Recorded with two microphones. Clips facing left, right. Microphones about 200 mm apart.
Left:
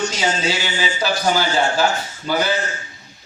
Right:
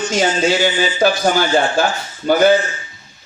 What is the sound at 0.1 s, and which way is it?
A man's voice, 50° right (ahead or behind).